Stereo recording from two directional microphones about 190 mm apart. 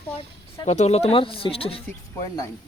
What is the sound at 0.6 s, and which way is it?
A man's voice, 35° left (ahead or behind).